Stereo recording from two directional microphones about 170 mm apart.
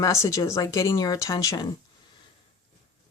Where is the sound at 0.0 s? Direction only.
15° left (ahead or behind).